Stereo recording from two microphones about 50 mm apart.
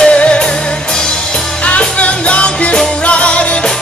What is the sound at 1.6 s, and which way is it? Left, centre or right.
Music, left.